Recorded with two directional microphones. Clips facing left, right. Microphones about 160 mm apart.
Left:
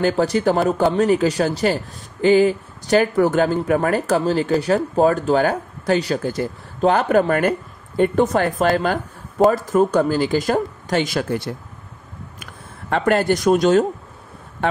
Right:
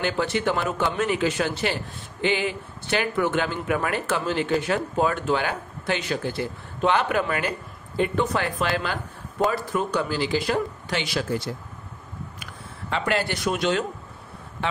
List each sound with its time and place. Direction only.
0.0 s speech: 40° left (ahead or behind); by 11.5 s 60° left (ahead or behind)
12.9 s speech: 50° left (ahead or behind)